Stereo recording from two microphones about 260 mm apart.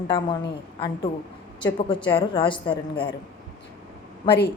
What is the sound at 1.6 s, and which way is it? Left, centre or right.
A woman's voice, centre.